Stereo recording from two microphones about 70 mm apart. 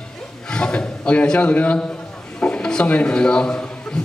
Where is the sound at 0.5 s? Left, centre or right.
Centre.